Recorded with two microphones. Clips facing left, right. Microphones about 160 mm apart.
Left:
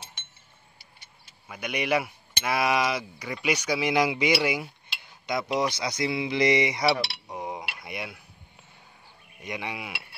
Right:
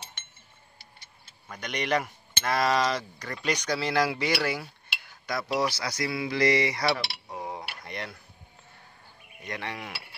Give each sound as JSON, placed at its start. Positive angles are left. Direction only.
{"t": 1.5, "sound": "speech", "side_deg": 10}
{"t": 5.2, "sound": "cutlery", "side_deg": 20}
{"t": 9.4, "sound": "speech", "side_deg": 10}